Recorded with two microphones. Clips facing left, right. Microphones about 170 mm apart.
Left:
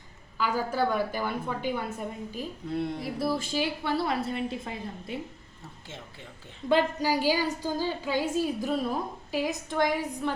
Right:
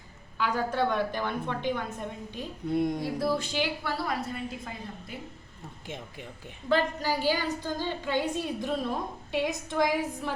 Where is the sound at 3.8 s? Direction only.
25° left (ahead or behind).